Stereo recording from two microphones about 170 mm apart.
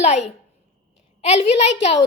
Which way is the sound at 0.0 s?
40° left (ahead or behind).